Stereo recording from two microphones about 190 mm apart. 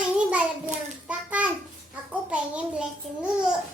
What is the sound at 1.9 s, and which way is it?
Child singing, 5° right (ahead or behind).